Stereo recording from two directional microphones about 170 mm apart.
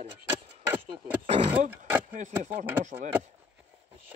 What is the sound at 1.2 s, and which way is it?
Speech, 35° right (ahead or behind).